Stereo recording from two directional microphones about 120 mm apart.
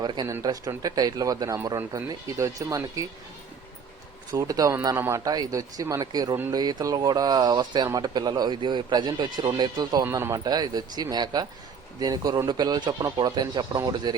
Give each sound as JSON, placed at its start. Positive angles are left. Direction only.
{"t": 0.0, "sound": "speech", "side_deg": -40}
{"t": 4.3, "sound": "speech", "side_deg": -30}
{"t": 10.0, "sound": "speech", "side_deg": -20}